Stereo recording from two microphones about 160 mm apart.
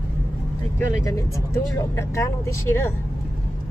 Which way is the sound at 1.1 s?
20° left (ahead or behind).